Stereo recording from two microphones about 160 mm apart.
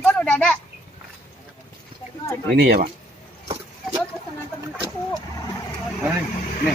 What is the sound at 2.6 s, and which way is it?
Speech, 65° right (ahead or behind).